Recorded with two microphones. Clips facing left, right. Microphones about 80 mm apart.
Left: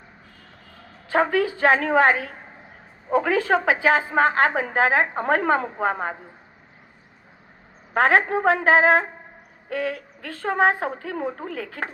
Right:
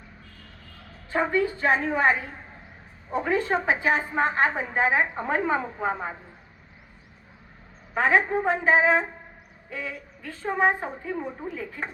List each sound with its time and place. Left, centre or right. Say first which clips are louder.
1.1 s a woman's voice: left 4 dB; left
7.9 s a woman's voice: left 3 dB; left
9.6 s a woman's voice: left 8 dB; left